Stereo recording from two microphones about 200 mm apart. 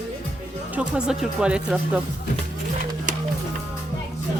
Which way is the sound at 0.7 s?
5° right (ahead or behind).